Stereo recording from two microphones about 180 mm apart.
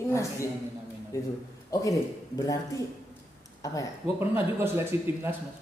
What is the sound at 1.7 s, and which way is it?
Speech, 20° left (ahead or behind).